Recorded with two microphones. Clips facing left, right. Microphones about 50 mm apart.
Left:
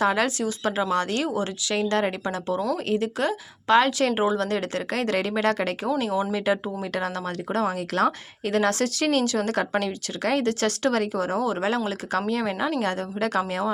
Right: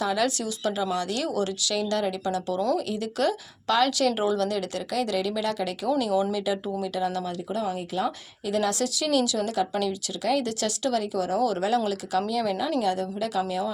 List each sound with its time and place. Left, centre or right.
0.0 s a woman's voice: left
6.0 s a woman's voice: left
7.4 s speech: left
8.5 s a woman's voice: left
12.8 s speech: left